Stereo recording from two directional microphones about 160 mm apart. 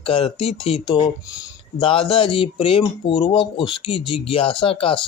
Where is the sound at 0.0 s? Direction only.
35° left (ahead or behind).